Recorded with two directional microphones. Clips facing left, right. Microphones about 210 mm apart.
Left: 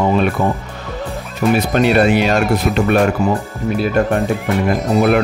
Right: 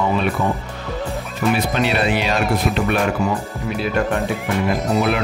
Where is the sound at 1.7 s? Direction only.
45° left (ahead or behind).